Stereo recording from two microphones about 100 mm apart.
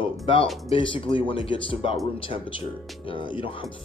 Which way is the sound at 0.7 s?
65° left (ahead or behind).